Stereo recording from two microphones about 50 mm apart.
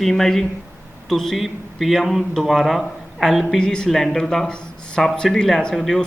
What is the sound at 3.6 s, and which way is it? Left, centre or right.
Speech, centre.